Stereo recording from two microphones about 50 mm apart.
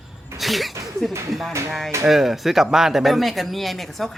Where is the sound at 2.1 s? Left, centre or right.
Centre.